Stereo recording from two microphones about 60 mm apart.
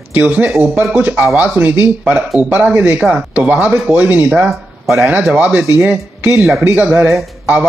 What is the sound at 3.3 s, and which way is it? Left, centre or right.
Speech, right.